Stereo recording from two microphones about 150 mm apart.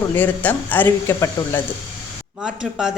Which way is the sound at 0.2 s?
10° left (ahead or behind).